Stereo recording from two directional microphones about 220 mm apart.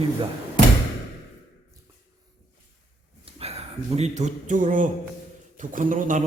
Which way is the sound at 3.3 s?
30° right (ahead or behind).